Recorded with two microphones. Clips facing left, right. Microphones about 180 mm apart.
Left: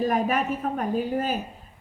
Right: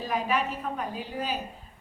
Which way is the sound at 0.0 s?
50° left (ahead or behind).